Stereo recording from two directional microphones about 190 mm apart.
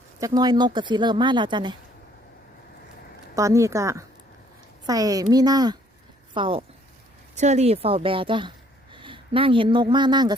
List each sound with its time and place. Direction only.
0.2 s speech: 20° right (ahead or behind)
3.3 s speech: 15° right (ahead or behind)
7.3 s speech: 35° right (ahead or behind)